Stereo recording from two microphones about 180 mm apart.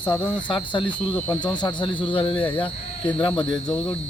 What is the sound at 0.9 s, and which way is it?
Speech, 10° left (ahead or behind).